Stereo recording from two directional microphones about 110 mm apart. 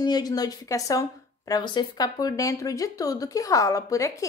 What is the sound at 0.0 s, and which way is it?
Speech, 40° left (ahead or behind).